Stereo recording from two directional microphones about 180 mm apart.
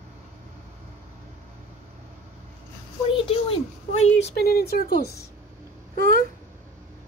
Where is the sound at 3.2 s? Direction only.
30° left (ahead or behind).